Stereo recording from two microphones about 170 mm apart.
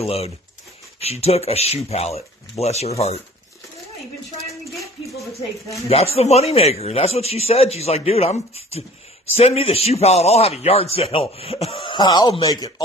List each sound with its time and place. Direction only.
0.0 s a man's voice: 35° left (ahead or behind)
5.9 s a man's voice: 35° left (ahead or behind); by 12.8 s 20° left (ahead or behind)